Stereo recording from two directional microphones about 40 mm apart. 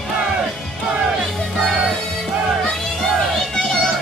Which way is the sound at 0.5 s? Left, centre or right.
Centre.